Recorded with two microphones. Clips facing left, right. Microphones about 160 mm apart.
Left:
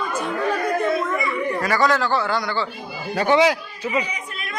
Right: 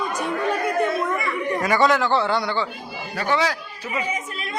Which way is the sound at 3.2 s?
20° left (ahead or behind).